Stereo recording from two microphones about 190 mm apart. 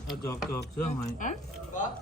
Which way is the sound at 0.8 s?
40° left (ahead or behind).